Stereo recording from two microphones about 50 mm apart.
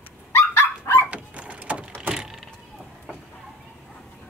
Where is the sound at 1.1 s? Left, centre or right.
Right.